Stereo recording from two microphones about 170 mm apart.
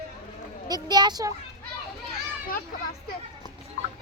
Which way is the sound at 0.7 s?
25° right (ahead or behind).